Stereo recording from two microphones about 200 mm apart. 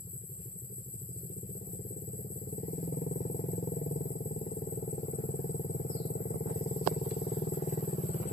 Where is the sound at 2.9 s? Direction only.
45° left (ahead or behind).